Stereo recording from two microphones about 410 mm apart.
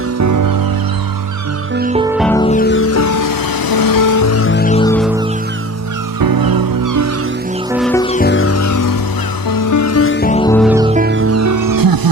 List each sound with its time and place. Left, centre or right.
0.2 s music: right
1.7 s music: centre
2.1 s music: centre
6.1 s music: right
7.7 s music: centre
10.7 s music: centre; by 12.1 s right